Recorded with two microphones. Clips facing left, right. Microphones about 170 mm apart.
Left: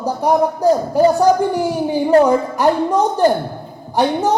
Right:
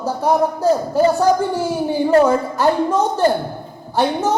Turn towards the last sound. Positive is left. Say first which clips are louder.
# left 1 dB
turn(degrees=15)  # may be behind; listen again after turning